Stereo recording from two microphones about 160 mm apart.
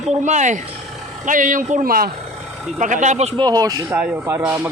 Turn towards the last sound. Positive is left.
turn(degrees=-15)  # may be behind; listen again after turning